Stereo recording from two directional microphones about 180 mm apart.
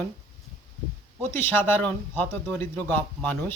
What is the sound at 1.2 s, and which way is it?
Speech, 10° left (ahead or behind).